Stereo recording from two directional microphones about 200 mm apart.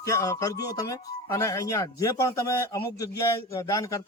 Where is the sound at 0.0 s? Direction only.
15° left (ahead or behind).